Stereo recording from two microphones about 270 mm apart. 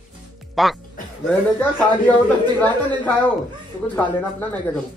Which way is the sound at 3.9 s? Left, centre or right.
Centre.